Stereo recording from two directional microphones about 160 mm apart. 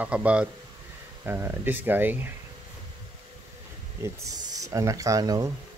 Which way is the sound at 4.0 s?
20° right (ahead or behind).